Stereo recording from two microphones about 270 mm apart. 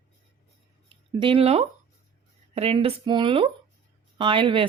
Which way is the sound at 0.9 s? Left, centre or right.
Centre.